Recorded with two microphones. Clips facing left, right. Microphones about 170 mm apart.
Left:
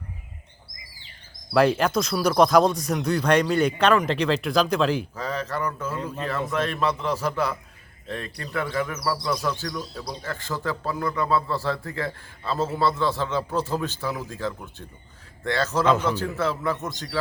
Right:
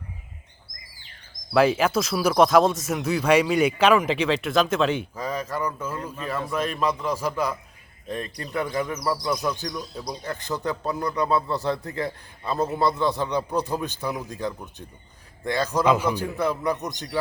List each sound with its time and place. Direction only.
1.5 s speech: 5° right (ahead or behind)
5.1 s speech: 10° right (ahead or behind)